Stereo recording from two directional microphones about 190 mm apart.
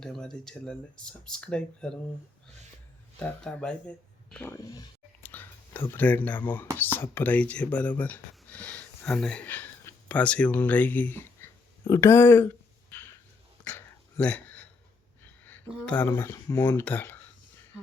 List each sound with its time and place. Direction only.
0.0 s speech: 5° left (ahead or behind)
3.2 s speech: 5° left (ahead or behind)
4.5 s speech: 20° left (ahead or behind)
5.2 s whispering: 10° left (ahead or behind)
5.9 s speech: 10° left (ahead or behind)
13.7 s dog: 10° left (ahead or behind)
15.2 s speech: 10° left (ahead or behind)